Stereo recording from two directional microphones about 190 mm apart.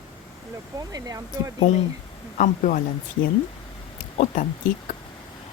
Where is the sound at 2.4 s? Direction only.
45° left (ahead or behind).